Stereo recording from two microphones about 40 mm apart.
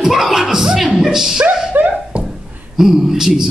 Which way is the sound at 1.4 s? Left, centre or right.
Right.